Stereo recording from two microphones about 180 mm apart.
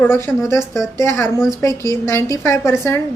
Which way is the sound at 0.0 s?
15° left (ahead or behind).